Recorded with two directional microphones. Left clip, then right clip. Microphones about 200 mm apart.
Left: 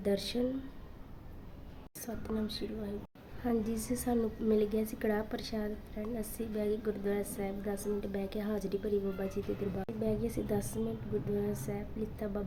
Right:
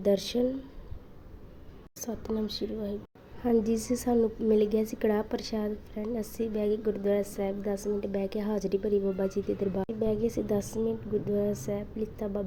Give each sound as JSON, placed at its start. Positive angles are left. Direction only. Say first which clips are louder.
{"t": 0.0, "sound": "a woman's voice", "louder": "right 7 dB", "side_deg": -15}
{"t": 2.0, "sound": "a woman's voice", "louder": "right 5 dB", "side_deg": -15}